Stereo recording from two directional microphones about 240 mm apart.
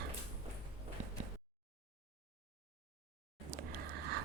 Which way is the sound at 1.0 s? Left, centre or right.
Right.